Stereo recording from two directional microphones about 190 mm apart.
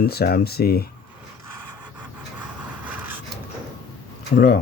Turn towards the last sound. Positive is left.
turn(degrees=60)  # may be behind; listen again after turning